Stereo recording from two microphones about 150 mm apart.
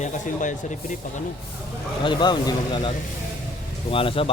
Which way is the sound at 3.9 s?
35° left (ahead or behind).